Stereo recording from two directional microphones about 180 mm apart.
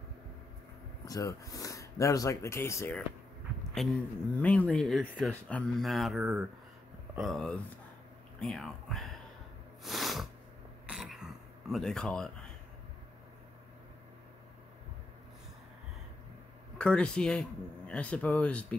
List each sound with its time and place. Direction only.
1.0 s speech: 20° left (ahead or behind)
3.7 s speech: centre (ahead or behind)
9.8 s a sound: centre (ahead or behind)
10.9 s throat clearing: 5° right (ahead or behind)
11.7 s speech: centre (ahead or behind)
16.7 s speech: 5° left (ahead or behind)